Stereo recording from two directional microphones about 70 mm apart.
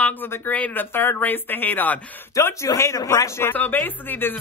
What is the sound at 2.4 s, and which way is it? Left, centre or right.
Speech, left.